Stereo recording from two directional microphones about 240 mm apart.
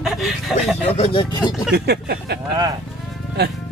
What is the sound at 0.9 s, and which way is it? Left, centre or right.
Speech, left.